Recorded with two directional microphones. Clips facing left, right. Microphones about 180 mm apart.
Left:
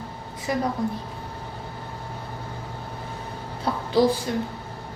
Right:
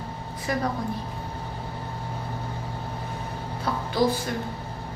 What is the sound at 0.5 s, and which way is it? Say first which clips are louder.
Speech: left 2 dB; 20° left (ahead or behind).